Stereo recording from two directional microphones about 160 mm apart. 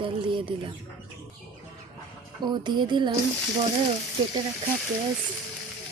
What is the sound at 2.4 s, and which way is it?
Speech, 25° right (ahead or behind).